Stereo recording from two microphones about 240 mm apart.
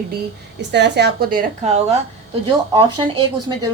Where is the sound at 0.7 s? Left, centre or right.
Right.